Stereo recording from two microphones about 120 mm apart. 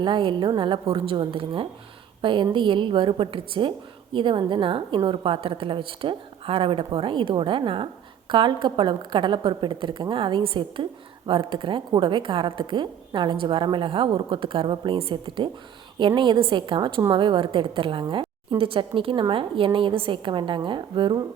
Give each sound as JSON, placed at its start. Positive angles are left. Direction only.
{"t": 0.0, "sound": "a woman's voice", "side_deg": -40}